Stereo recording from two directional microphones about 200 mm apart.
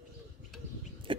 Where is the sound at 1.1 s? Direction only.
25° right (ahead or behind).